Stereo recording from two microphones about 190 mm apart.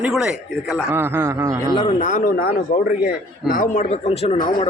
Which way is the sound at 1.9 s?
40° left (ahead or behind).